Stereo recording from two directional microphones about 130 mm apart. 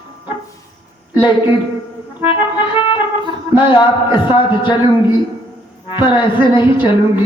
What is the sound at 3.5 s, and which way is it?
Speech, 40° left (ahead or behind).